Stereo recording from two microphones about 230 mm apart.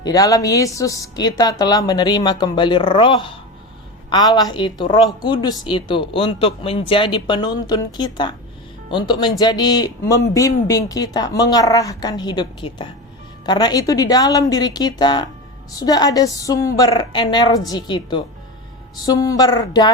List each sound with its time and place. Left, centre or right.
0.0 s a man's voice: centre